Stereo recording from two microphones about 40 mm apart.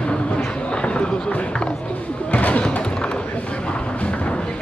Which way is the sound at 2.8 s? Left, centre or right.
Left.